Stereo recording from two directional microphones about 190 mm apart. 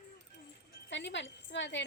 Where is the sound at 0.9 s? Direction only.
70° left (ahead or behind).